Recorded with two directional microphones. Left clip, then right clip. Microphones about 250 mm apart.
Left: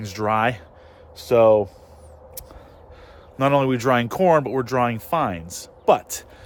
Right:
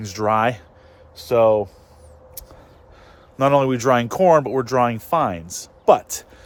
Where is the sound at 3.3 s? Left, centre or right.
Centre.